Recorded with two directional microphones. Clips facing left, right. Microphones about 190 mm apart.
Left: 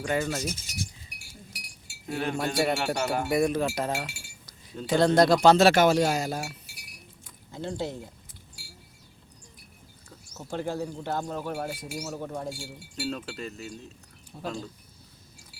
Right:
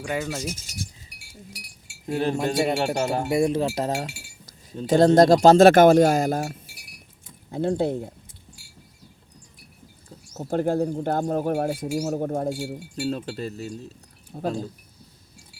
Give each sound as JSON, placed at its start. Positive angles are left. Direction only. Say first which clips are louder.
{"t": 0.0, "sound": "speech", "louder": "even", "side_deg": -5}
{"t": 2.0, "sound": "speech", "louder": "right 5 dB", "side_deg": -30}
{"t": 3.8, "sound": "chink", "louder": "right 4 dB", "side_deg": -40}
{"t": 4.9, "sound": "speech", "louder": "right 5 dB", "side_deg": -45}
{"t": 10.1, "sound": "bird", "louder": "right 8 dB", "side_deg": -35}
{"t": 10.5, "sound": "speech", "louder": "right 9 dB", "side_deg": -50}
{"t": 12.7, "sound": "speech", "louder": "right 6 dB", "side_deg": -35}